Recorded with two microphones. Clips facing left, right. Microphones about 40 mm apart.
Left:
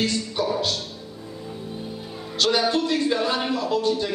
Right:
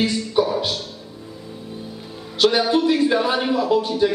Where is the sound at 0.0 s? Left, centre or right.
Centre.